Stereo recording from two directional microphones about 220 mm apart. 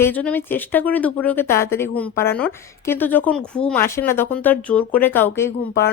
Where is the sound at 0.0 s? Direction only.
5° left (ahead or behind).